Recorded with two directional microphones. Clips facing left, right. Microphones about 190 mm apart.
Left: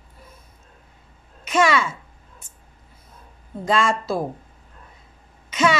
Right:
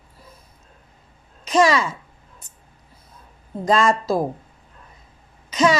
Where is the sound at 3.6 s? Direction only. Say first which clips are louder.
Right 3 dB; 40° right (ahead or behind).